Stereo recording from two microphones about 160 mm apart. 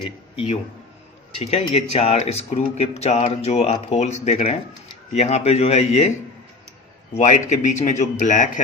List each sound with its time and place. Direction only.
1.4 s a man's voice: 40° left (ahead or behind)